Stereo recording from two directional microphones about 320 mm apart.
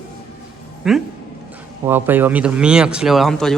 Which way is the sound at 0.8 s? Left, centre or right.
Centre.